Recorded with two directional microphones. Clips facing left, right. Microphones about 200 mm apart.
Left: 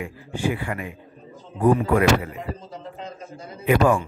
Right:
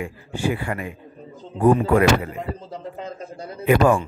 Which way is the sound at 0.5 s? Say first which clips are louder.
Right 2 dB; 40° right (ahead or behind).